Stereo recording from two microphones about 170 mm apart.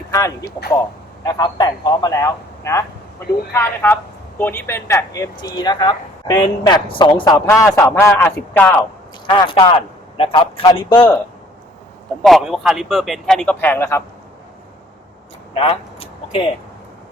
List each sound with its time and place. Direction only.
0.1 s a man's voice: 20° left (ahead or behind)
9.2 s speech: 30° left (ahead or behind)
12.2 s a man's voice: centre (ahead or behind)
15.5 s speech: 35° left (ahead or behind)